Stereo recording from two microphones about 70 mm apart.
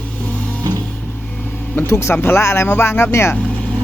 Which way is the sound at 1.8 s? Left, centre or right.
Left.